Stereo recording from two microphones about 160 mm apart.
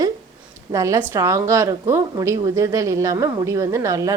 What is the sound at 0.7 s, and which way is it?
Speech, 20° right (ahead or behind).